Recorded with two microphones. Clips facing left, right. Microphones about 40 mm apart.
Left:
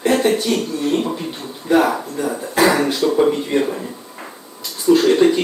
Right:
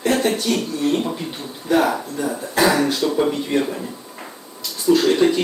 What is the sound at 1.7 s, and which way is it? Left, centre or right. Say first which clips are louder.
Speech: left 2 dB; left.